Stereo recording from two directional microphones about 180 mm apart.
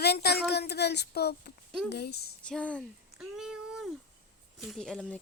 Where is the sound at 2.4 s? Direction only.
5° left (ahead or behind).